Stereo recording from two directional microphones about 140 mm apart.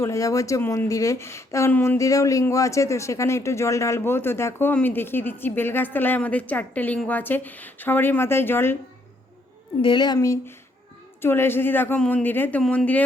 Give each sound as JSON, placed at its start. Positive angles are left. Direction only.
{"t": 0.0, "sound": "speech", "side_deg": 25}
{"t": 9.8, "sound": "speech", "side_deg": 30}